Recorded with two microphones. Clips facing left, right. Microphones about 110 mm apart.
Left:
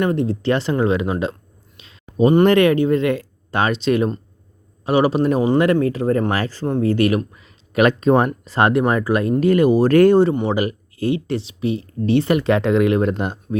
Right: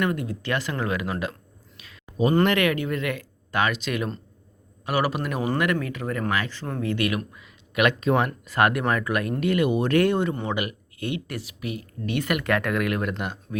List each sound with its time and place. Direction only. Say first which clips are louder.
0.0 s speech: left 7 dB; 30° left (ahead or behind)